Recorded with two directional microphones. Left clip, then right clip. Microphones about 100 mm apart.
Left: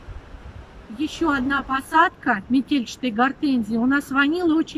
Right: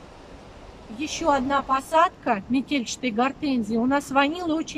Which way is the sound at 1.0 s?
30° right (ahead or behind).